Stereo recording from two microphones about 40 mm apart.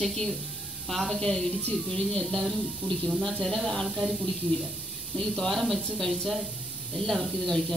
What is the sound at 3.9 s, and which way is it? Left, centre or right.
Speech, centre.